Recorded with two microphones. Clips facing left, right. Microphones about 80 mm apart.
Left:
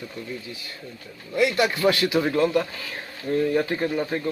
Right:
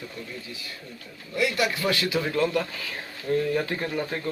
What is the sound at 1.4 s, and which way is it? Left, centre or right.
A man's voice, left.